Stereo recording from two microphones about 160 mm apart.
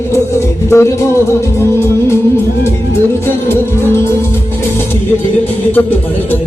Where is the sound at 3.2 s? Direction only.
15° left (ahead or behind).